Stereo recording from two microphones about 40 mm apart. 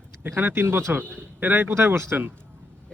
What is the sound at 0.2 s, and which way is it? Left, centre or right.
Speech, right.